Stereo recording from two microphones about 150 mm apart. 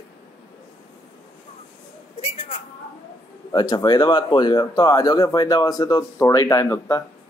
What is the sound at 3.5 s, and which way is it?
Speech, 25° left (ahead or behind).